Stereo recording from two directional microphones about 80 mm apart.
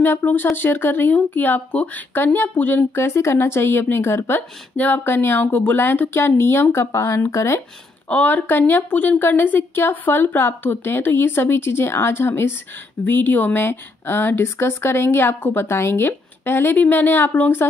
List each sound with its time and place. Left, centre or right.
0.0 s speech: left
8.1 s speech: left